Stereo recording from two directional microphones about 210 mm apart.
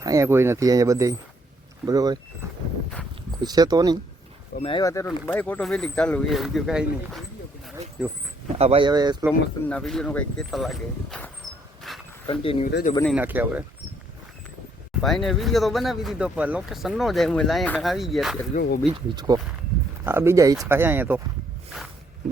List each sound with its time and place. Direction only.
0.0 s speech: 15° right (ahead or behind)
3.3 s speech: 20° right (ahead or behind)
4.6 s speech: 20° left (ahead or behind); by 8.1 s 5° right (ahead or behind)
8.4 s speech: 30° right (ahead or behind)
9.6 s speech: 5° left (ahead or behind)
11.9 s a sound: centre (ahead or behind)
12.3 s speech: 25° left (ahead or behind)
13.1 s speech: 10° right (ahead or behind)
15.0 s speech: centre (ahead or behind)
18.5 s speech: 40° left (ahead or behind)
18.9 s speech: 20° right (ahead or behind)